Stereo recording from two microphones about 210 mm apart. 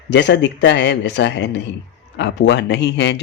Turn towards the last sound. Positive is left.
turn(degrees=55)  # may be behind; listen again after turning